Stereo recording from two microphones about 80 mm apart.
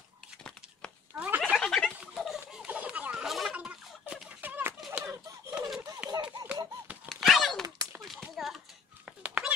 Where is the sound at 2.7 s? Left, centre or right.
Centre.